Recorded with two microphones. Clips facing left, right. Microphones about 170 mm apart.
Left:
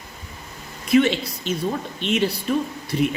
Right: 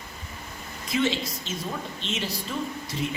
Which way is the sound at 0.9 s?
65° left (ahead or behind).